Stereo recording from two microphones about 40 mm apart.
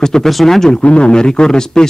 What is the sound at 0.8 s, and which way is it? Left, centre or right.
Speech, left.